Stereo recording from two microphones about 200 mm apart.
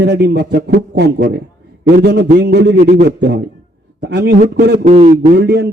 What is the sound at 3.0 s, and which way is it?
A man's voice, 55° right (ahead or behind).